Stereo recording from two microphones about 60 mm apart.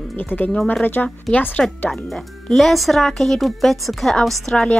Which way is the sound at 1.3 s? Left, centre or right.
Centre.